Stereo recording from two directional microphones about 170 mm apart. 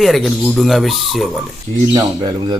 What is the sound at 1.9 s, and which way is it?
Speech, 25° right (ahead or behind).